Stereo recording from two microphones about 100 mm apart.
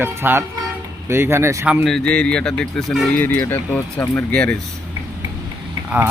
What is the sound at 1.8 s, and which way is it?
Speech, 10° left (ahead or behind).